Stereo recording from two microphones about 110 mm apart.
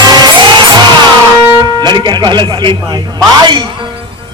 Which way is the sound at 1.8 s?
45° right (ahead or behind).